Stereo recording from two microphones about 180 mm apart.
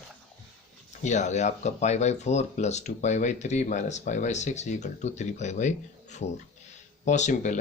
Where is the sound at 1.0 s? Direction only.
40° left (ahead or behind).